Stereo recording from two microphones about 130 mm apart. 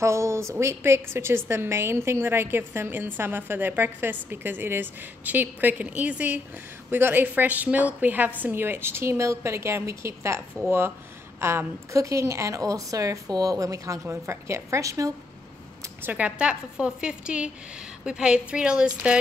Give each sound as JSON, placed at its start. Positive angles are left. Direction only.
{"t": 0.0, "sound": "a woman's voice", "side_deg": -20}
{"t": 15.8, "sound": "a woman's voice", "side_deg": -15}